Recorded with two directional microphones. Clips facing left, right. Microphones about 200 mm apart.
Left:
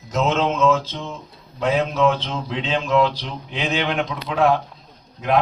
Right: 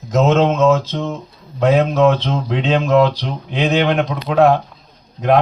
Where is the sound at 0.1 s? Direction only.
45° right (ahead or behind).